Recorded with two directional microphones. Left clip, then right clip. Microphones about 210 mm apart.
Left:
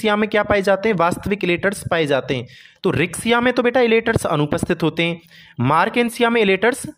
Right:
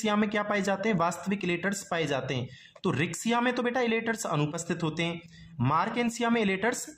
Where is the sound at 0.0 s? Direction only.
35° left (ahead or behind).